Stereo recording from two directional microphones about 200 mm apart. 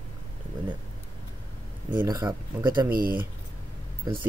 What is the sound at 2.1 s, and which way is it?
Speech, 20° right (ahead or behind).